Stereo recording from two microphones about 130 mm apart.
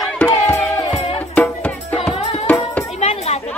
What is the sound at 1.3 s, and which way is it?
Music, 10° left (ahead or behind).